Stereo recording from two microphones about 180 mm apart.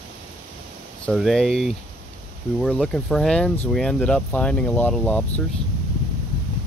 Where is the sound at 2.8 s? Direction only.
Centre (ahead or behind).